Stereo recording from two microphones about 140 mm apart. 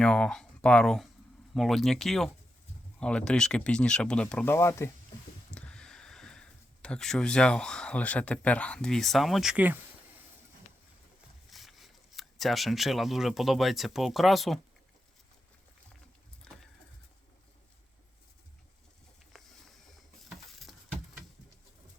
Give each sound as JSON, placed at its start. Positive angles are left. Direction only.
{"t": 0.0, "sound": "speech", "side_deg": 5}
{"t": 4.5, "sound": "speech", "side_deg": 20}
{"t": 5.5, "sound": "speech", "side_deg": 10}
{"t": 11.5, "sound": "speech", "side_deg": 0}
{"t": 16.4, "sound": "a sound", "side_deg": 5}